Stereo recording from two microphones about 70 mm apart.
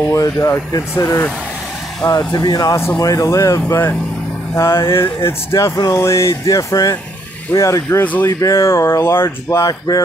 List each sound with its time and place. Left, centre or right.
0.2 s speech: left
2.0 s speech: left
3.0 s speech: left
3.6 s speech: left
8.0 s speech: left
8.3 s speech: left
9.6 s speech: left